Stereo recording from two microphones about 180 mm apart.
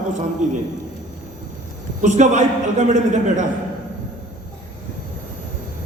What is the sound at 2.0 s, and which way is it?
A woman's voice, 45° right (ahead or behind).